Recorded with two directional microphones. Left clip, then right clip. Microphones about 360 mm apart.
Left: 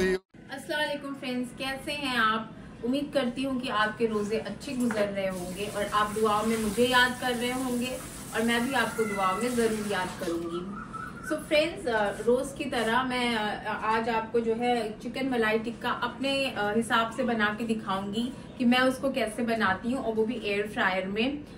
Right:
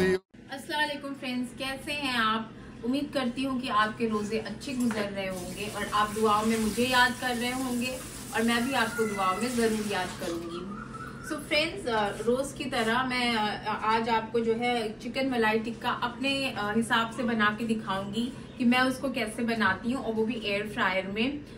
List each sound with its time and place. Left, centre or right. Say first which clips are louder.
0.7 s a woman's voice: even; centre
11.2 s a woman's voice: left 2 dB; centre